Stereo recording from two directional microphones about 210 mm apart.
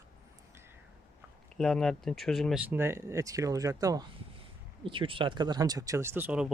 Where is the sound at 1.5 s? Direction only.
Centre (ahead or behind).